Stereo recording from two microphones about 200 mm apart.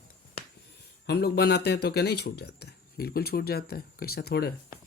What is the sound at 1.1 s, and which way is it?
Speech, 55° left (ahead or behind).